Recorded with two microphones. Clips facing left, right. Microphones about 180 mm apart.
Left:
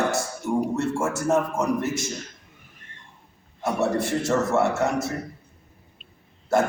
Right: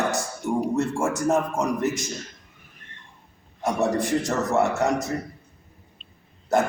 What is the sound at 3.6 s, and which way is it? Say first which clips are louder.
Speech: even; 15° right (ahead or behind).